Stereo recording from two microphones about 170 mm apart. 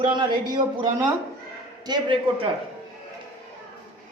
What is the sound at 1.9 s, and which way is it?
Speech, 30° right (ahead or behind).